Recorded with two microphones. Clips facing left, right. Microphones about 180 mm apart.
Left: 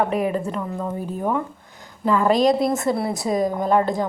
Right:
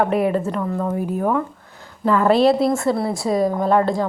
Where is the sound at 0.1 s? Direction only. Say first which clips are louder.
Right 3 dB; 35° right (ahead or behind).